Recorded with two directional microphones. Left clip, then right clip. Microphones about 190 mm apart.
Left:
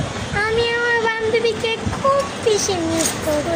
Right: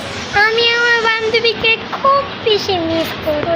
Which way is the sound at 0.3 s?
5° right (ahead or behind).